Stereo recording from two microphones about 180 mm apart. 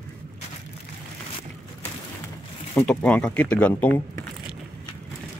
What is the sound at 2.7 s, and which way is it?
Speech, 5° left (ahead or behind).